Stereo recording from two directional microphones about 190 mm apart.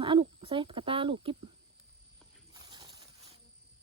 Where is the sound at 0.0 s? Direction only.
25° right (ahead or behind).